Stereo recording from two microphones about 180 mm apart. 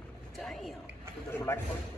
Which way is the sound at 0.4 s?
Centre (ahead or behind).